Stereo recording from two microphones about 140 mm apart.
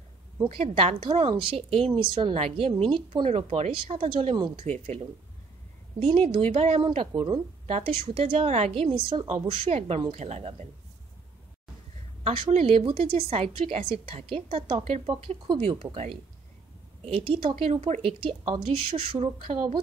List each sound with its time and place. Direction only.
0.5 s a woman's voice: 45° right (ahead or behind)
6.2 s a woman's voice: 45° right (ahead or behind)
12.2 s a woman's voice: 45° right (ahead or behind)